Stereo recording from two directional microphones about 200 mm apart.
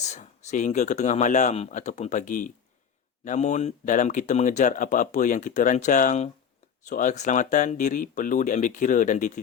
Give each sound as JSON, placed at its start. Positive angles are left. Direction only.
{"t": 0.0, "sound": "speech", "side_deg": 35}